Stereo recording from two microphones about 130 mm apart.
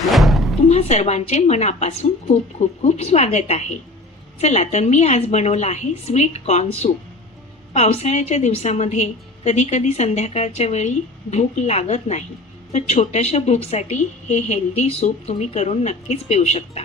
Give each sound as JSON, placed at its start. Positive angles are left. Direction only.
{"t": 0.0, "sound": "music", "side_deg": 0}
{"t": 0.7, "sound": "a woman's voice", "side_deg": 55}